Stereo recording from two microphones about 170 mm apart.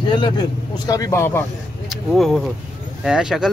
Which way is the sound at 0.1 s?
25° left (ahead or behind).